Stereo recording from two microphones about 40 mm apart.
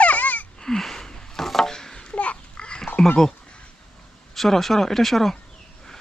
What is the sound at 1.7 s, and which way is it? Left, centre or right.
Children playing, centre.